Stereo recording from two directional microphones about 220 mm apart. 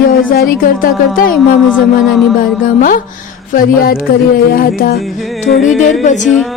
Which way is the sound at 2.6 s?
40° left (ahead or behind).